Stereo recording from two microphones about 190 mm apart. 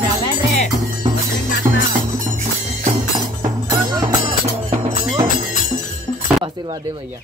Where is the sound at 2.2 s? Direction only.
40° right (ahead or behind).